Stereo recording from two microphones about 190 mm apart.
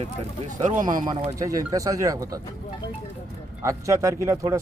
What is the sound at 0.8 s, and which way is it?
Speech, 45° right (ahead or behind).